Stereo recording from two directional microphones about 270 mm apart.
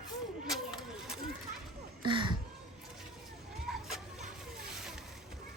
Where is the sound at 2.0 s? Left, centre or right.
Centre.